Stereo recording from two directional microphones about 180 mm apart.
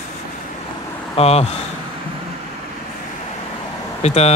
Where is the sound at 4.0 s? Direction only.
35° left (ahead or behind).